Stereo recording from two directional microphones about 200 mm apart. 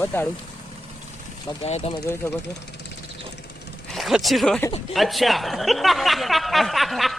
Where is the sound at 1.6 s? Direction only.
35° left (ahead or behind).